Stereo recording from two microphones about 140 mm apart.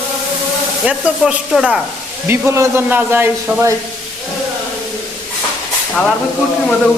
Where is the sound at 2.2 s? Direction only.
15° right (ahead or behind).